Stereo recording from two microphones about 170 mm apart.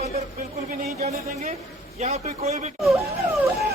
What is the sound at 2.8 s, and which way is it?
Wail, centre (ahead or behind).